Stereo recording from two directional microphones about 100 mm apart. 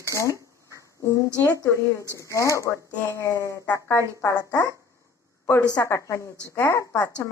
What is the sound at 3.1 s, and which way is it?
Speech, 30° left (ahead or behind).